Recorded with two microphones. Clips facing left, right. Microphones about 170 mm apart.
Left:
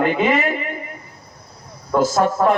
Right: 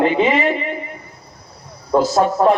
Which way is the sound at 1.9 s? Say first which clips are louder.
Right 2 dB; 30° right (ahead or behind).